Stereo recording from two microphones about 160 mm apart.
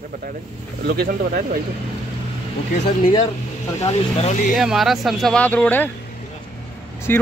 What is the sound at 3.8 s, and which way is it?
Speech, 40° left (ahead or behind).